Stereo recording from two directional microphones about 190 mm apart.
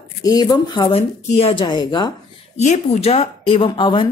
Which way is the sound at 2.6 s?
35° left (ahead or behind).